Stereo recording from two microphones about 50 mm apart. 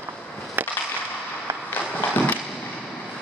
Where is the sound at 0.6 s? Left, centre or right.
Right.